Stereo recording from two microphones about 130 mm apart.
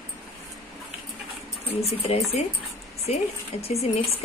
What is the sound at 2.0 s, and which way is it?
A woman's voice, 50° left (ahead or behind).